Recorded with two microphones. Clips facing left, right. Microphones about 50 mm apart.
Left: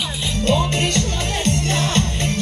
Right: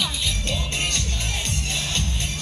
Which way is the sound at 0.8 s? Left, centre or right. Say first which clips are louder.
Left 7 dB; left.